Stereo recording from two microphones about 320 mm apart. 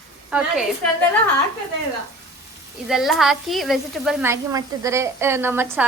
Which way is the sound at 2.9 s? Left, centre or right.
Centre.